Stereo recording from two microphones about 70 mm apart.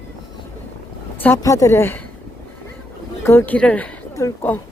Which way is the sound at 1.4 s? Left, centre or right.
Left.